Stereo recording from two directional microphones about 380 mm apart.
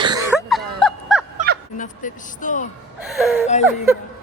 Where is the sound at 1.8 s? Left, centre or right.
Centre.